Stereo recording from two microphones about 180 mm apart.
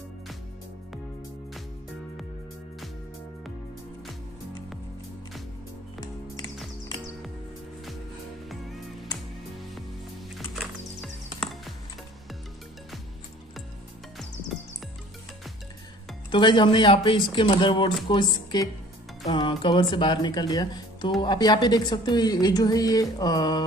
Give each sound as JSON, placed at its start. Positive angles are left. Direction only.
{"t": 5.9, "sound": "music", "side_deg": 20}
{"t": 8.5, "sound": "music", "side_deg": 0}
{"t": 10.3, "sound": "music", "side_deg": 0}
{"t": 16.3, "sound": "speech", "side_deg": 25}